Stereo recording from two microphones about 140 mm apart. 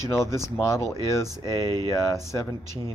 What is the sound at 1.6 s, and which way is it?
Speech, 25° right (ahead or behind).